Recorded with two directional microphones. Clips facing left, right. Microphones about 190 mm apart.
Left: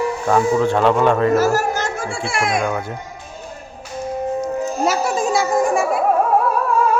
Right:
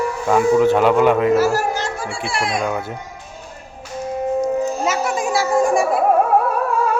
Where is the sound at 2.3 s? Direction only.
45° left (ahead or behind).